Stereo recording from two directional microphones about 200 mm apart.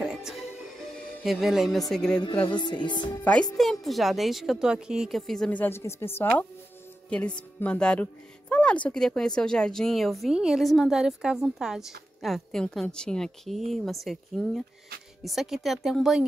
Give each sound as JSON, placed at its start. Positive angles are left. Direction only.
{"t": 0.0, "sound": "music", "side_deg": 0}
{"t": 2.4, "sound": "music", "side_deg": 25}
{"t": 3.5, "sound": "speech", "side_deg": 0}